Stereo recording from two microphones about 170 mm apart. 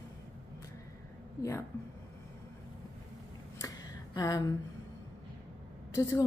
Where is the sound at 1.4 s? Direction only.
15° left (ahead or behind).